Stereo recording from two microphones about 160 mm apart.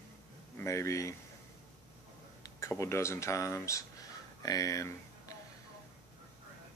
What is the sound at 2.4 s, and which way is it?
Speech, 20° left (ahead or behind).